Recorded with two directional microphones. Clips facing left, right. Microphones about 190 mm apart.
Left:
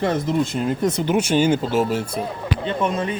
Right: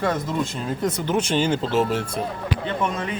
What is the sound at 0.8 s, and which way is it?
Speech, 10° left (ahead or behind).